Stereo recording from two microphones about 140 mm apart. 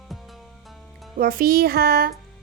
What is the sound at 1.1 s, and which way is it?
Speech, 90° right.